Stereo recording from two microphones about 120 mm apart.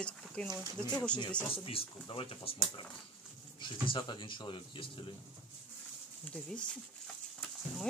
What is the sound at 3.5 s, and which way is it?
Speech, 45° left (ahead or behind).